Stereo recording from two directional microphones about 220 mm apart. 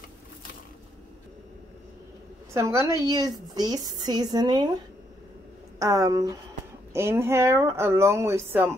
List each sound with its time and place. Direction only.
2.5 s speech: 15° right (ahead or behind)
5.8 s speech: 15° right (ahead or behind)